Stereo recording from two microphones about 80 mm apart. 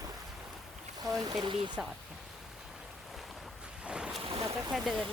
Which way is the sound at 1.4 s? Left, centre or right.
Right.